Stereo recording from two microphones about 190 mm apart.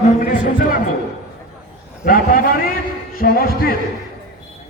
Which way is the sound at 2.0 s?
50° left (ahead or behind).